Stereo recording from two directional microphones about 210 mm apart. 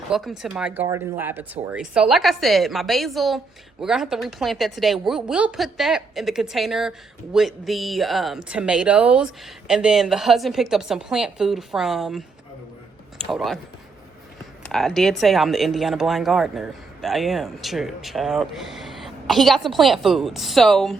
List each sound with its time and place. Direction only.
0.1 s speech: centre (ahead or behind)
13.3 s speech: centre (ahead or behind)
14.6 s speech: centre (ahead or behind)